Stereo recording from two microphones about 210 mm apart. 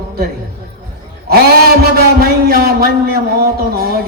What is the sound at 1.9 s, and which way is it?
A man's voice, 45° right (ahead or behind).